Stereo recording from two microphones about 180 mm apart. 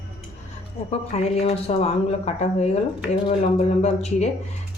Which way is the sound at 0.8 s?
35° left (ahead or behind).